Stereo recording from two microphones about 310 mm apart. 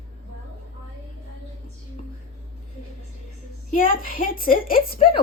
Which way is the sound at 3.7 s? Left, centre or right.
Left.